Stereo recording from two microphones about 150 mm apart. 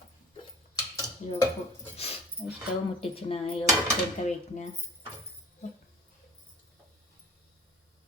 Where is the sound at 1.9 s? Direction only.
45° left (ahead or behind).